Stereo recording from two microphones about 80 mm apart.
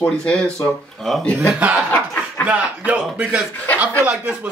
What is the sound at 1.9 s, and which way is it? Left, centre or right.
Snicker, left.